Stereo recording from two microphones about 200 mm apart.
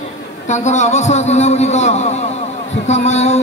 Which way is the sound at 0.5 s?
35° left (ahead or behind).